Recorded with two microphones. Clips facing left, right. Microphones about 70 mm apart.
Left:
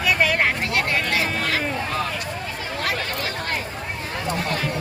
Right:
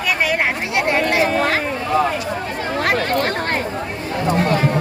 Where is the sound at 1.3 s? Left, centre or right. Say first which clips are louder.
Right 7 dB; right.